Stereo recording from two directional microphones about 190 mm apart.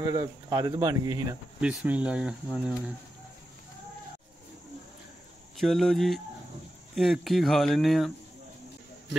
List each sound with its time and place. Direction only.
0.0 s speech: 15° right (ahead or behind)
1.6 s speech: 5° right (ahead or behind)
5.6 s speech: centre (ahead or behind)